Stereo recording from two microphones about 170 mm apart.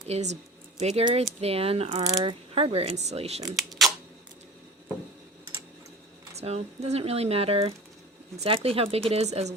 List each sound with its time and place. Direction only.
0.1 s speech: 40° right (ahead or behind)
2.0 s speech: 20° right (ahead or behind)
2.6 s speech: 35° right (ahead or behind)
3.5 s camera: centre (ahead or behind)
6.3 s speech: 40° right (ahead or behind)